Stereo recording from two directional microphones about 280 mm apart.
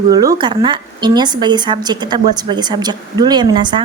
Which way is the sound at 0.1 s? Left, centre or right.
Centre.